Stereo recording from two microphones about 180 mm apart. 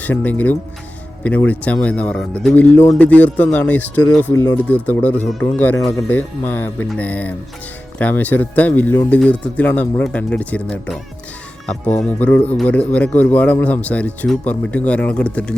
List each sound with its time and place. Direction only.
0.0 s speech: 10° left (ahead or behind)
4.3 s speech: 20° left (ahead or behind)
4.5 s speech: 10° left (ahead or behind)